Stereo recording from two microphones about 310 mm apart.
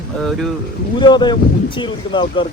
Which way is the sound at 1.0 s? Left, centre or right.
Centre.